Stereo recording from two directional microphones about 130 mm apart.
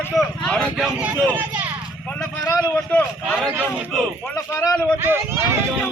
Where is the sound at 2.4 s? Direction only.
25° left (ahead or behind).